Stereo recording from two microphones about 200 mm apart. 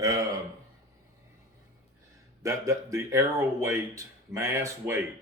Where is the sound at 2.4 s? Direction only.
15° right (ahead or behind).